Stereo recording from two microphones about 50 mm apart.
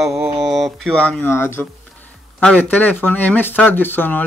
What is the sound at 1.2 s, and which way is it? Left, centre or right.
Speech, left.